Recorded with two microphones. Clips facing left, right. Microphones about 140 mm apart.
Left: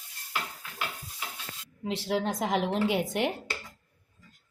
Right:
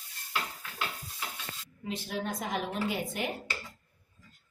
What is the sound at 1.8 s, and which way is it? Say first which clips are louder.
A woman's voice: left 6 dB; 90° left.